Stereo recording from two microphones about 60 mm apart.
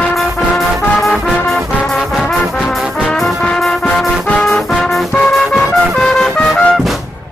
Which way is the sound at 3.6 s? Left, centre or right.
Centre.